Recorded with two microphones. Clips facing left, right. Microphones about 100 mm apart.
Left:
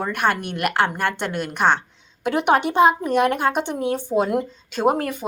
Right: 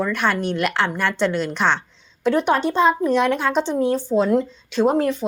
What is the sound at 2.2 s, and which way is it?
A woman's voice, 60° left (ahead or behind).